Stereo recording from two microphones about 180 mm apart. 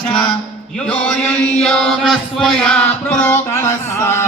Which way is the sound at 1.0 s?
5° left (ahead or behind).